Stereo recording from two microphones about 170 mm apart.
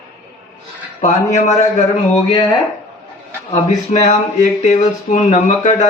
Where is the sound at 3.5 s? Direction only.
40° left (ahead or behind).